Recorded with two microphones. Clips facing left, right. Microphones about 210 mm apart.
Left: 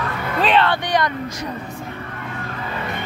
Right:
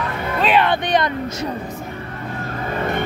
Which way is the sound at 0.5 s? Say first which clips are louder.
Right 2 dB; 20° right (ahead or behind).